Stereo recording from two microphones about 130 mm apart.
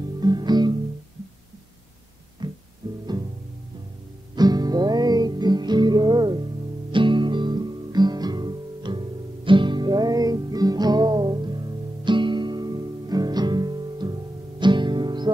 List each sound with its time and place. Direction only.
0.2 s music: 35° right (ahead or behind)
2.4 s music: 35° right (ahead or behind)
4.4 s music: 30° right (ahead or behind)